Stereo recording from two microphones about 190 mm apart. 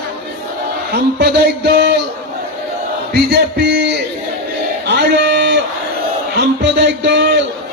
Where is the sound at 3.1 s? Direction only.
60° right (ahead or behind).